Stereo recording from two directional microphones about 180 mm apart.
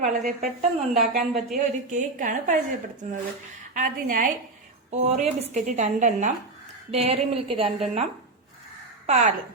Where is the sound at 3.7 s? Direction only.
50° right (ahead or behind).